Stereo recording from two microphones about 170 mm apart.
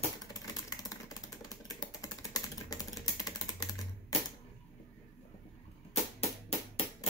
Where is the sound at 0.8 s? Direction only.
20° left (ahead or behind).